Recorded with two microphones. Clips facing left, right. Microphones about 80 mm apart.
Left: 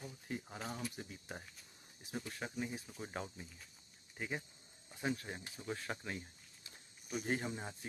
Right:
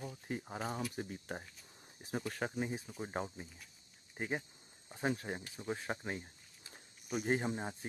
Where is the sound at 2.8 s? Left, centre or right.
Centre.